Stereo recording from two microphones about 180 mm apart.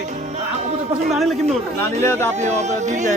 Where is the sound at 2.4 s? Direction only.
40° right (ahead or behind).